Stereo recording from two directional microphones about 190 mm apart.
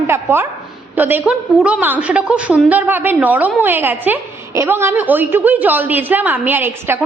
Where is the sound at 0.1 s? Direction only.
10° right (ahead or behind).